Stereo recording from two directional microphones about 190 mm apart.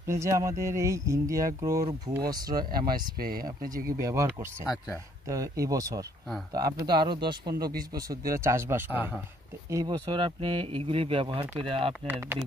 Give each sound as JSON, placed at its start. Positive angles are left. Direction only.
{"t": 0.0, "sound": "speech", "side_deg": -15}
{"t": 2.5, "sound": "speech", "side_deg": -50}
{"t": 4.0, "sound": "speech", "side_deg": -15}